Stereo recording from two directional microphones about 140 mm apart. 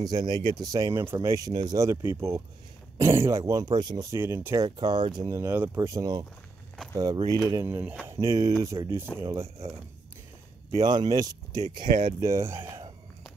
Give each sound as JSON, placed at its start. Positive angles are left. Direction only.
{"t": 0.0, "sound": "speech", "side_deg": -30}
{"t": 4.6, "sound": "speech", "side_deg": -30}
{"t": 10.8, "sound": "speech", "side_deg": -30}
{"t": 11.9, "sound": "speech", "side_deg": -70}
{"t": 12.2, "sound": "speech", "side_deg": -20}